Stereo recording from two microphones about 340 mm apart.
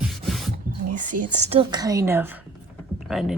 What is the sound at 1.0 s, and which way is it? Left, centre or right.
Speech, right.